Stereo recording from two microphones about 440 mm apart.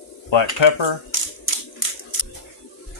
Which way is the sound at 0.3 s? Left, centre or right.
Left.